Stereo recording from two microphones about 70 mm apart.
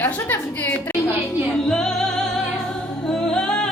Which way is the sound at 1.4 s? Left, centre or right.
Centre.